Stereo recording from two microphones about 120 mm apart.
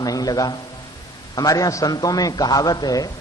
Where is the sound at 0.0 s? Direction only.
30° left (ahead or behind).